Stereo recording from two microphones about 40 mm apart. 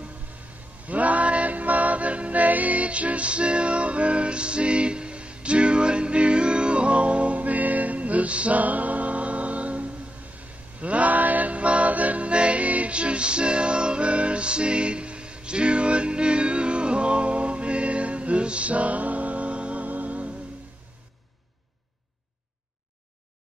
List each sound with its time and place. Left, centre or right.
0.8 s music: right